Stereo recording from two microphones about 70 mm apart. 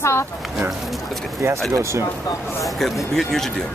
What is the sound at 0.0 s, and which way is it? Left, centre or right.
Speech, left.